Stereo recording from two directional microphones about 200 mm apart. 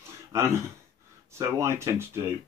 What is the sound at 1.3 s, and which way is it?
Speech, 15° right (ahead or behind).